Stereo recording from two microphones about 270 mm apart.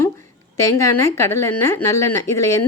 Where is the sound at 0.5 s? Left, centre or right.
Centre.